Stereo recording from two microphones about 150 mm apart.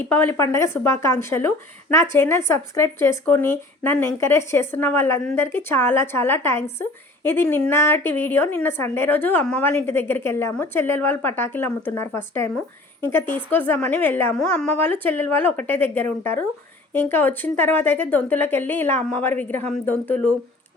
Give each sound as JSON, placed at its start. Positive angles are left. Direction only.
{"t": 0.1, "sound": "a woman's voice", "side_deg": 15}